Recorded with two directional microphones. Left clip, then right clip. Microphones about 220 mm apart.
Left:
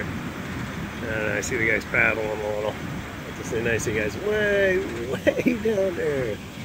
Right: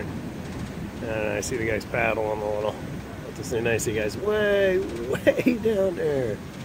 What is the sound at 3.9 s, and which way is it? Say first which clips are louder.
Speech: even; 20° right (ahead or behind).